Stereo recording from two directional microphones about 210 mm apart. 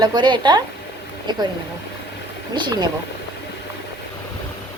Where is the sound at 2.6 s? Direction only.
20° right (ahead or behind).